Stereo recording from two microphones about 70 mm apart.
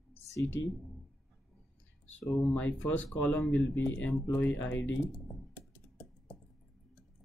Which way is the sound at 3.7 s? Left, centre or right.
Left.